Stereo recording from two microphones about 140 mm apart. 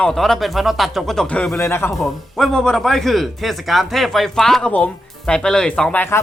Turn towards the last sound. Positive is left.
turn(degrees=15)  # may be behind; listen again after turning